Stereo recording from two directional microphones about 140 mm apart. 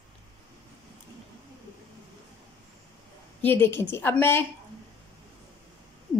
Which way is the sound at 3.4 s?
15° left (ahead or behind).